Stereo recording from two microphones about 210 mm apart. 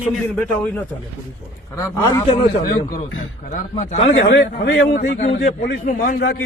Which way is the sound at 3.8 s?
35° left (ahead or behind).